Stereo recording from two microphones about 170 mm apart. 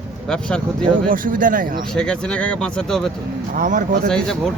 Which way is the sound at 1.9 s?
5° left (ahead or behind).